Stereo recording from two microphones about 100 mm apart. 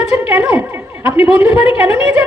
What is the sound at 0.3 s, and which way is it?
A man's voice, 15° right (ahead or behind).